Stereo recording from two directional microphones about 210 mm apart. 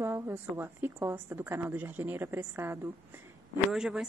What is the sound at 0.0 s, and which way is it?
A woman's voice, 10° right (ahead or behind).